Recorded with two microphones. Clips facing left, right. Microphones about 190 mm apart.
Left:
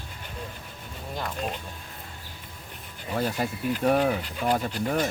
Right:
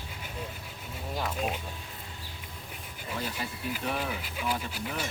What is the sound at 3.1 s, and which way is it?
Speech, 45° left (ahead or behind).